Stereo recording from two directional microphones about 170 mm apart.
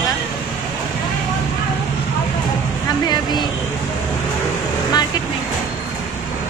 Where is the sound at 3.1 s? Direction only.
25° left (ahead or behind).